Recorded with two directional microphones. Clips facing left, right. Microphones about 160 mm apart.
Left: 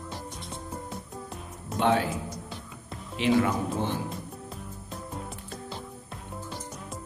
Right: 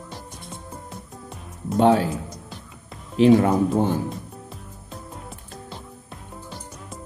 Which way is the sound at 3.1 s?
40° right (ahead or behind).